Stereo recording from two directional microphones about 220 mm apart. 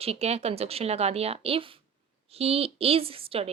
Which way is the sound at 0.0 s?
25° right (ahead or behind).